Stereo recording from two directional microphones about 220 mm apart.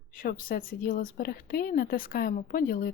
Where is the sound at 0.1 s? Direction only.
40° left (ahead or behind).